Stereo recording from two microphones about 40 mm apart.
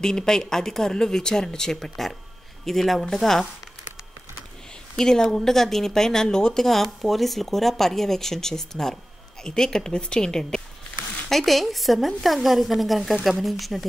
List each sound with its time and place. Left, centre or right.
0.0 s a woman's voice: centre
4.9 s speech: centre
11.2 s a woman's voice: centre